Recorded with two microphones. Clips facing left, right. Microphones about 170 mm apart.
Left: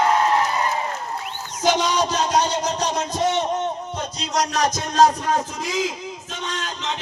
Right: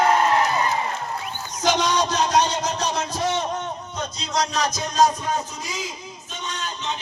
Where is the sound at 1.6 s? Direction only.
10° left (ahead or behind).